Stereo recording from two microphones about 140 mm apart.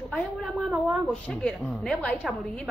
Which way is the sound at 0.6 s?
5° right (ahead or behind).